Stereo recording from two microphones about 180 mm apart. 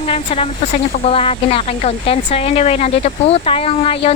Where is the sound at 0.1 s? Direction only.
35° left (ahead or behind).